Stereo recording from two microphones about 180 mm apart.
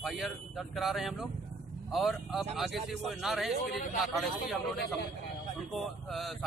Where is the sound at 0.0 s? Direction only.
Centre (ahead or behind).